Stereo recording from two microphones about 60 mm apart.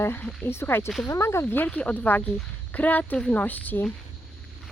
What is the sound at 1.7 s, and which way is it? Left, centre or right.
Speech, left.